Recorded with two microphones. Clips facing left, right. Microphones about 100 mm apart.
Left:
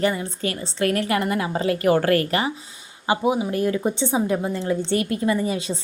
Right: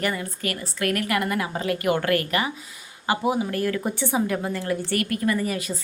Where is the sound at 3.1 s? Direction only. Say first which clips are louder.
Left 2 dB; 20° left (ahead or behind).